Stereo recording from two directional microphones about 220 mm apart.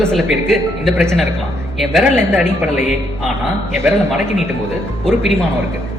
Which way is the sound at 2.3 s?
10° right (ahead or behind).